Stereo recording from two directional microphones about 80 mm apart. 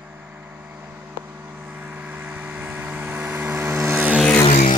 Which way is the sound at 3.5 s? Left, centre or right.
Right.